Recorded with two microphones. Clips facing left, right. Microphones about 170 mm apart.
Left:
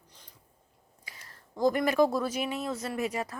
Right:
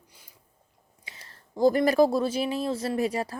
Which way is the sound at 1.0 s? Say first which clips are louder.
Right 2 dB; 25° right (ahead or behind).